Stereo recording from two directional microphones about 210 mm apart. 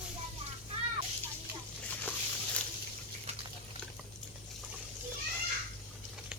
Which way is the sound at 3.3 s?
30° right (ahead or behind).